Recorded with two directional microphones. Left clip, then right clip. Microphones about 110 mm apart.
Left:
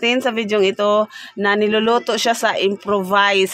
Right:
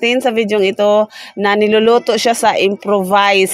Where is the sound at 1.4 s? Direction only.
50° right (ahead or behind).